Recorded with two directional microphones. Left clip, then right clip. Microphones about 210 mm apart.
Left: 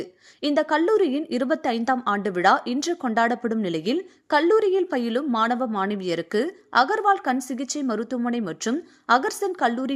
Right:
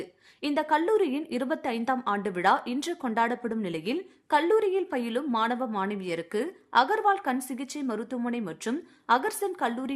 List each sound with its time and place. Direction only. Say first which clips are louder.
0.0 s a woman's voice: left 6 dB; 15° left (ahead or behind)